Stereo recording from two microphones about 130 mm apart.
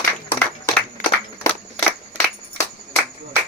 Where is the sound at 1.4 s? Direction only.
20° left (ahead or behind).